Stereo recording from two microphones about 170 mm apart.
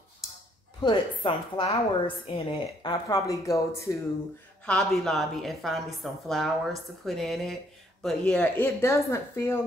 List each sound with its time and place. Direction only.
0.7 s a woman's voice: 25° left (ahead or behind)
4.6 s a woman's voice: centre (ahead or behind)
8.6 s a woman's voice: 15° left (ahead or behind)